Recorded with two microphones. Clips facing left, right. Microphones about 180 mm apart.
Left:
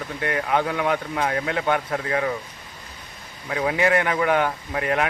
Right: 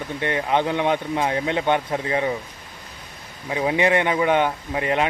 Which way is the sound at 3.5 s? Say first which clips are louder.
Right 1 dB; 20° right (ahead or behind).